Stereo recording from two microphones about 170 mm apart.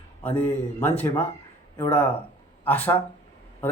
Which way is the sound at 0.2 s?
10° left (ahead or behind).